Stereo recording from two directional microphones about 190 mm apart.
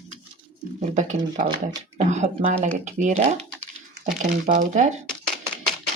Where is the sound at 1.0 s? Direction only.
40° right (ahead or behind).